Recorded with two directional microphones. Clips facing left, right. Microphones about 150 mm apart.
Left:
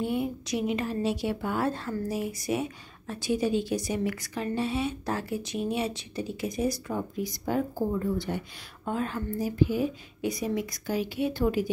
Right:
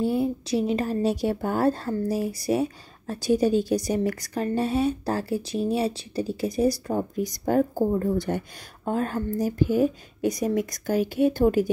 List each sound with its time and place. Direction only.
0.0 s a woman's voice: 35° right (ahead or behind)